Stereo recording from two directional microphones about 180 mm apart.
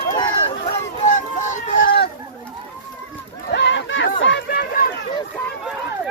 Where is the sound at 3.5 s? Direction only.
85° left; by 4.9 s 55° left (ahead or behind).